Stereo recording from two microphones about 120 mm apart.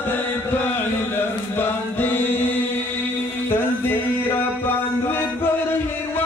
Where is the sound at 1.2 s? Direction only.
15° left (ahead or behind).